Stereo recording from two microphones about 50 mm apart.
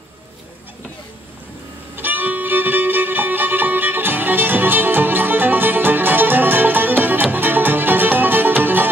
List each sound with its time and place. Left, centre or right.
2.0 s music: right